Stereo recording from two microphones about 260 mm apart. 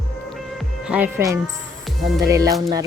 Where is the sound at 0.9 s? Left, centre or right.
Centre.